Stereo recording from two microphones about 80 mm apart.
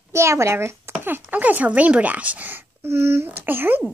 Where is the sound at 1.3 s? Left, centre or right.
Centre.